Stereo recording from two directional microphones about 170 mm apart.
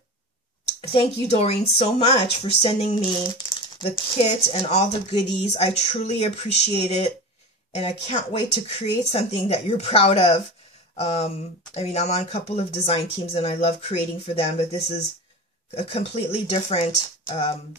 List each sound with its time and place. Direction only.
0.7 s speech: 40° left (ahead or behind)